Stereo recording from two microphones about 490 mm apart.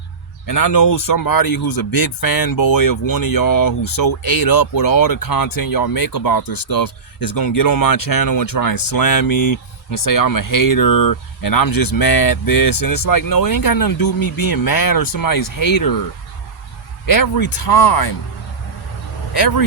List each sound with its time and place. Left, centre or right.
0.4 s speech: left
17.1 s speech: left
19.3 s speech: left